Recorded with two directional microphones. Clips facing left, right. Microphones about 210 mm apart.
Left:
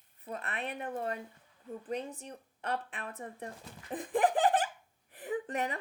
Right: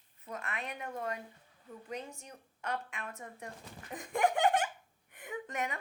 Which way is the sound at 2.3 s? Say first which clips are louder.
Left 2 dB; 35° left (ahead or behind).